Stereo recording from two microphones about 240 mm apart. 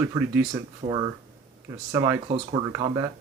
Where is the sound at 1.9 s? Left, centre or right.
Centre.